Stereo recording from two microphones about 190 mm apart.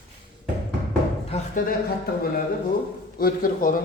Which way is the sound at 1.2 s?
35° left (ahead or behind).